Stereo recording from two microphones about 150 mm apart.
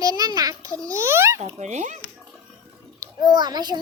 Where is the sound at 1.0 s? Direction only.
15° right (ahead or behind).